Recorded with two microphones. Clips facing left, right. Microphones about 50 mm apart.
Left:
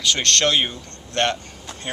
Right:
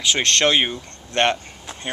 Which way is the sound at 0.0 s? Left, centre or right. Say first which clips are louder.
Right 1 dB; centre.